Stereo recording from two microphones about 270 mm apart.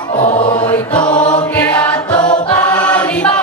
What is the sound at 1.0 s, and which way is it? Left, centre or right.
Mantra, centre.